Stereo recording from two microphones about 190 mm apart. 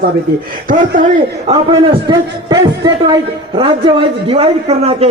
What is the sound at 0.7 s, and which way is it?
Speech, 45° right (ahead or behind).